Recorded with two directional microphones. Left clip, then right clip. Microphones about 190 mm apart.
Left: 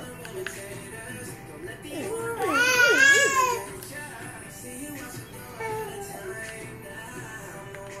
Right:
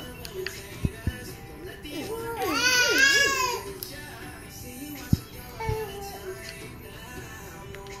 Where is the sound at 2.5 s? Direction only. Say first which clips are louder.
Left 3 dB; 10° right (ahead or behind).